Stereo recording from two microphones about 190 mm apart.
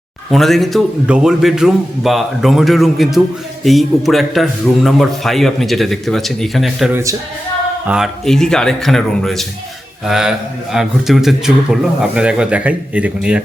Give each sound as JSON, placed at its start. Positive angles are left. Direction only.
{"t": 0.3, "sound": "a man's voice", "side_deg": 0}
{"t": 6.9, "sound": "speech", "side_deg": -15}
{"t": 7.9, "sound": "a man's voice", "side_deg": 0}